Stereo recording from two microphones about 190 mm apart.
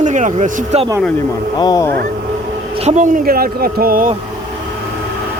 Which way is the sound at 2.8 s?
40° right (ahead or behind).